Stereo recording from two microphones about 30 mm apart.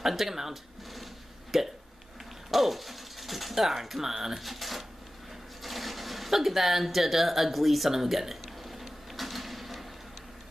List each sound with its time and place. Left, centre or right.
0.0 s speech: centre
1.5 s hiccup: centre
2.5 s speech: centre
4.4 s speech: centre
7.9 s a sound: centre